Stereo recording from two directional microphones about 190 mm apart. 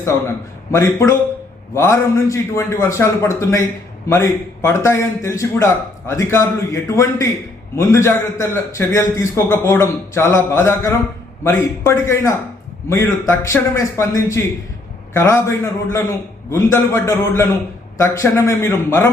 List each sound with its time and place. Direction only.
0.8 s a man's voice: 15° left (ahead or behind)